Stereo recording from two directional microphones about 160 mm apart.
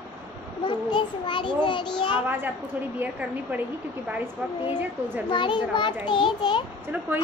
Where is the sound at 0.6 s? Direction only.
30° left (ahead or behind).